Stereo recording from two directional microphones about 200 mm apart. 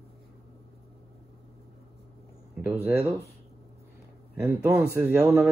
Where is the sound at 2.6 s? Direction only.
10° right (ahead or behind).